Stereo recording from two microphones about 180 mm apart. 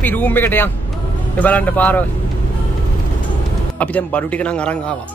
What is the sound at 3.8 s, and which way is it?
Speech, 10° left (ahead or behind).